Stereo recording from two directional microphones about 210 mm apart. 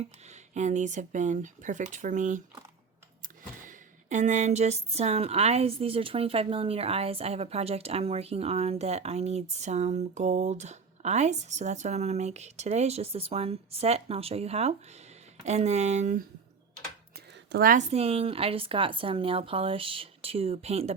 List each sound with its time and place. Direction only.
0.5 s speech: 35° right (ahead or behind)
3.6 s speech: 35° right (ahead or behind)
17.5 s a woman's voice: 45° right (ahead or behind)
17.9 s speech: 30° right (ahead or behind)